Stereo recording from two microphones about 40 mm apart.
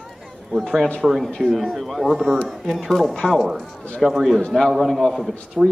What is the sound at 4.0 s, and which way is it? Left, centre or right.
Speech, centre.